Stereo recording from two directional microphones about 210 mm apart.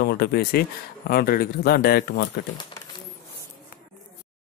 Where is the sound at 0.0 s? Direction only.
50° left (ahead or behind).